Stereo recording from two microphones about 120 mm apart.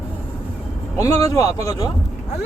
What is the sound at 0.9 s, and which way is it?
Speech, 25° left (ahead or behind).